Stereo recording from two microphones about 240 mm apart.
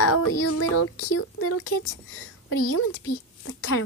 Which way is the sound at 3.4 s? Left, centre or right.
Left.